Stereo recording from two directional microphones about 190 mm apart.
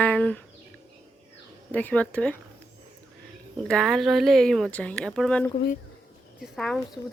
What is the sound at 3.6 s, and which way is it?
Speech, 5° left (ahead or behind).